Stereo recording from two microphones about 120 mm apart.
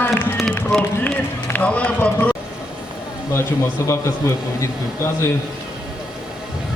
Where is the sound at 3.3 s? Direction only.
25° left (ahead or behind).